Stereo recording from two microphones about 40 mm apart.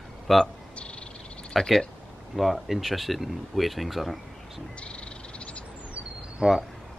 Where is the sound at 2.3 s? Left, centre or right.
Centre.